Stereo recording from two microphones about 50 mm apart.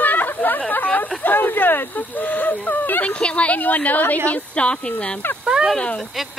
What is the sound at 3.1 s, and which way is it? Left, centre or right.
A woman's voice, left.